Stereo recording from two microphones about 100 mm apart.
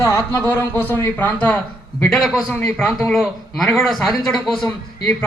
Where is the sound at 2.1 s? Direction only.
Centre (ahead or behind).